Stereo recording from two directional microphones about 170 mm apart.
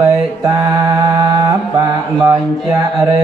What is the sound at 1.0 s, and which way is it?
Mantra, 20° right (ahead or behind).